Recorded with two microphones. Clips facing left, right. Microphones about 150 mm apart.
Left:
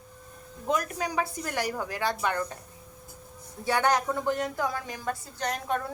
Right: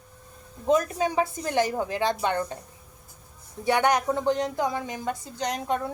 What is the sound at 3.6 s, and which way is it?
A woman's voice, 20° right (ahead or behind).